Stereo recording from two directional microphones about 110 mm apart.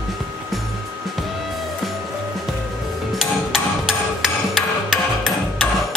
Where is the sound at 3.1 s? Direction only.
5° right (ahead or behind).